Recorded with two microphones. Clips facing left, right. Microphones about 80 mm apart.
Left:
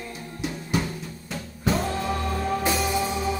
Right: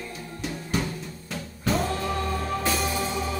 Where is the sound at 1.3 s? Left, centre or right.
Centre.